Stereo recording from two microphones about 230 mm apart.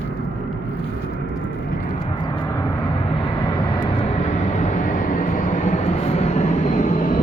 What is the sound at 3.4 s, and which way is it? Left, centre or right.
Vehicle, left.